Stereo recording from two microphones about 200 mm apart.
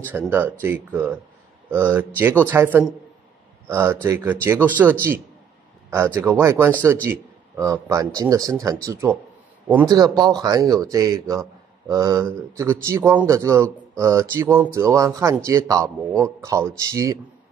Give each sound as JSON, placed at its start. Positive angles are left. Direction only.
{"t": 0.0, "sound": "speech", "side_deg": -10}